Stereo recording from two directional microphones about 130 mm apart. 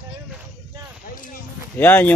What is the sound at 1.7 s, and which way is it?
Speech, 15° left (ahead or behind).